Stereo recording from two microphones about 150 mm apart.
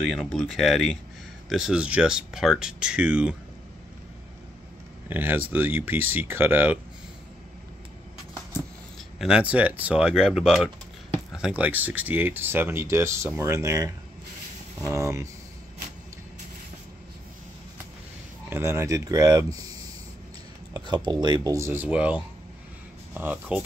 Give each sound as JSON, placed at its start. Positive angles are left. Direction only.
{"t": 0.0, "sound": "speech", "side_deg": 5}
{"t": 5.0, "sound": "speech", "side_deg": -15}
{"t": 9.2, "sound": "speech", "side_deg": -5}
{"t": 18.5, "sound": "speech", "side_deg": -15}
{"t": 20.7, "sound": "speech", "side_deg": -25}